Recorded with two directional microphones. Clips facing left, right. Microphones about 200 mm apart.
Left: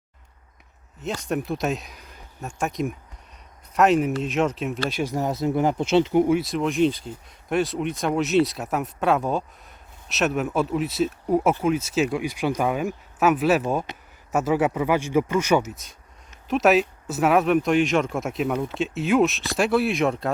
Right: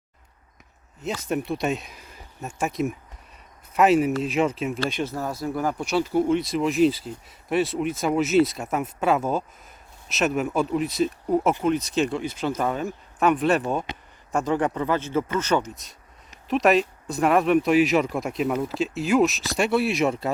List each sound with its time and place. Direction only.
1.0 s speech: centre (ahead or behind)
5.0 s speech: 20° left (ahead or behind)
6.3 s speech: centre (ahead or behind)